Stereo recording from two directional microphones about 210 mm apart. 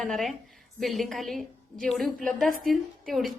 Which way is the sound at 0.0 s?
Centre (ahead or behind).